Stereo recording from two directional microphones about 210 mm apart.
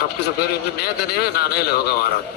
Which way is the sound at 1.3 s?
50° left (ahead or behind).